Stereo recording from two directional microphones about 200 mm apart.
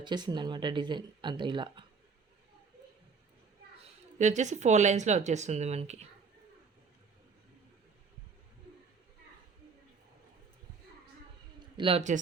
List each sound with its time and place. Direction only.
0.0 s speech: 20° right (ahead or behind)
4.2 s speech: 35° right (ahead or behind)
11.8 s speech: 30° right (ahead or behind)